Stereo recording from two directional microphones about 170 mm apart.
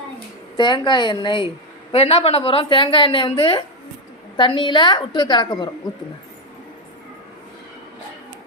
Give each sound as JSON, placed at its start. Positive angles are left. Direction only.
{"t": 0.5, "sound": "a woman's voice", "side_deg": 25}